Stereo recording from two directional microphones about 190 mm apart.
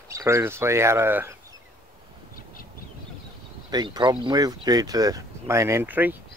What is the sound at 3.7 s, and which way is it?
Speech, 20° right (ahead or behind).